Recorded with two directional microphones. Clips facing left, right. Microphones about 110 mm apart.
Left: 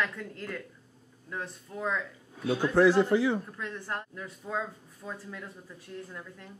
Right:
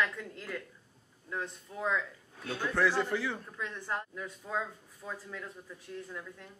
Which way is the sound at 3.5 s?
Centre (ahead or behind).